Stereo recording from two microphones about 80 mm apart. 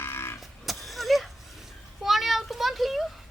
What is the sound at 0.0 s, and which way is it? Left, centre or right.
Vehicle, left.